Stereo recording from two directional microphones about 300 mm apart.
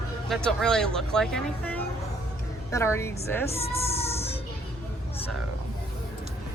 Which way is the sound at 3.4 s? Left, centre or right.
Centre.